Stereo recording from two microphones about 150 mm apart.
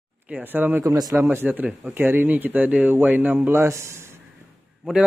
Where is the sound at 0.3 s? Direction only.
10° right (ahead or behind).